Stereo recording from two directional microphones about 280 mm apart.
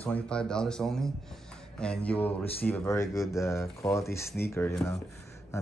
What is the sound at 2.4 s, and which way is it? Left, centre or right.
Speech, left.